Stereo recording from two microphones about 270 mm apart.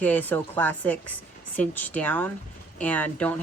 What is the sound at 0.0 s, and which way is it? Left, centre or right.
Speech, centre.